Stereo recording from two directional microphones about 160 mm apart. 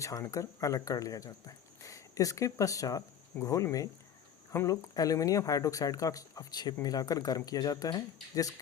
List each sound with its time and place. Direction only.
0.0 s speech: 20° left (ahead or behind)